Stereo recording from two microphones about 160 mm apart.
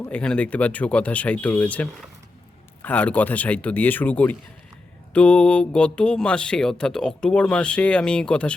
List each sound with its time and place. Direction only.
0.0 s speech: 5° left (ahead or behind)